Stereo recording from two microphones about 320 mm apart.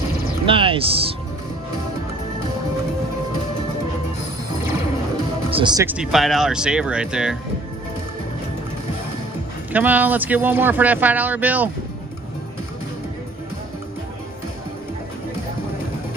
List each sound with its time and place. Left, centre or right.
0.5 s speech: centre
5.5 s speech: centre
9.7 s speech: centre